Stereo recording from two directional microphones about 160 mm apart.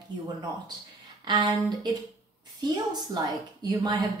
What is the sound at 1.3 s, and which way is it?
A woman's voice, 25° right (ahead or behind).